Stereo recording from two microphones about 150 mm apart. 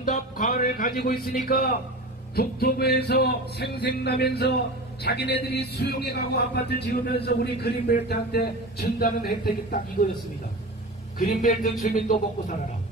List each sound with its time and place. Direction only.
0.0 s music: 60° left (ahead or behind); by 1.2 s 80° left
1.3 s a man's voice: 80° left
2.3 s speech: 90° left
11.1 s speech: 60° left (ahead or behind)